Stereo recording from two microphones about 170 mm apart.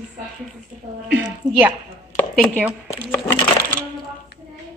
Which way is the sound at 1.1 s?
10° right (ahead or behind).